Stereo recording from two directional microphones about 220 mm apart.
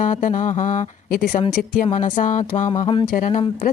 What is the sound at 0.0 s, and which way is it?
Speech, 35° left (ahead or behind).